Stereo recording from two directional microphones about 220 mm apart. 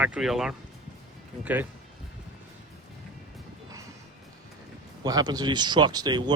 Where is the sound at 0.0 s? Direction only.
5° right (ahead or behind).